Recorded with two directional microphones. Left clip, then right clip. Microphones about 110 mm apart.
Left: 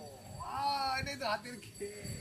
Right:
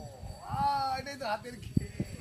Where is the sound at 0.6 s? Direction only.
25° right (ahead or behind).